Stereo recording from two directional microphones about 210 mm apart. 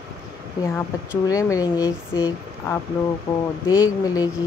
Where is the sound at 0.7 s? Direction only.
15° left (ahead or behind).